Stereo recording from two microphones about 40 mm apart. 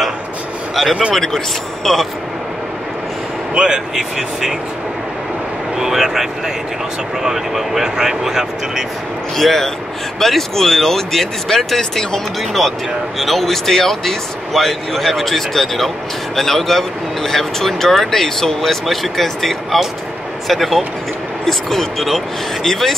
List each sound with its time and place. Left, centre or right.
1.1 s speech: centre
3.5 s speech: centre
5.8 s speech: centre
9.4 s a man's voice: centre